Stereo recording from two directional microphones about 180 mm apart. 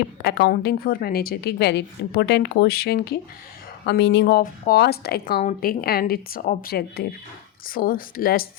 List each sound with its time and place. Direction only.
0.2 s a woman's voice: 65° left (ahead or behind)
3.8 s a woman's voice: 70° left (ahead or behind); by 8.4 s 55° left (ahead or behind)